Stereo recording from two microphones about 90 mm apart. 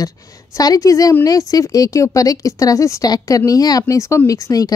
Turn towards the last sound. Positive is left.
turn(degrees=40)  # may be behind; listen again after turning